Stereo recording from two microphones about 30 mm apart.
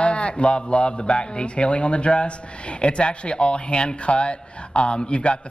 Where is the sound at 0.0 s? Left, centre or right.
Left.